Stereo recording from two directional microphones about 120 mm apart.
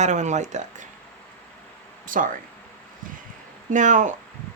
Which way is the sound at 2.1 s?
90° right.